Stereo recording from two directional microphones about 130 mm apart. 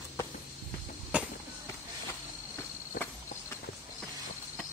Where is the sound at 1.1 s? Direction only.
10° right (ahead or behind).